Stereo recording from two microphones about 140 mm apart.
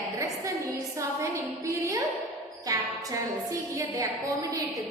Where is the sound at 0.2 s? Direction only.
20° right (ahead or behind).